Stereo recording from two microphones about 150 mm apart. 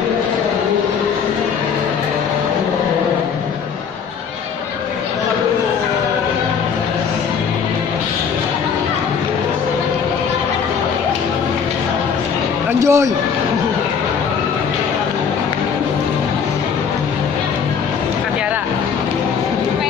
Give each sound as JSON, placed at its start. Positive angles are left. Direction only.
{"t": 12.8, "sound": "a man's voice", "side_deg": -20}